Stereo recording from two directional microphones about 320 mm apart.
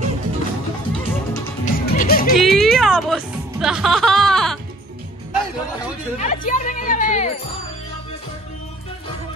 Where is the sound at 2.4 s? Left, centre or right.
Centre.